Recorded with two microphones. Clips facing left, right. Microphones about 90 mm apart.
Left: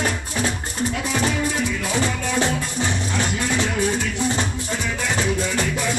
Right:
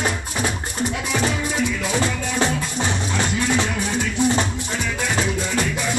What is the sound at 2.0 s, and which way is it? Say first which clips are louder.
Music: even; 20° right (ahead or behind).